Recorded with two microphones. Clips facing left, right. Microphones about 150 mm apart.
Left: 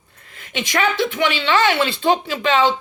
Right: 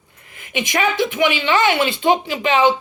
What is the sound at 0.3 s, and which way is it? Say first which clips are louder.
Speech: right 1 dB; 15° right (ahead or behind).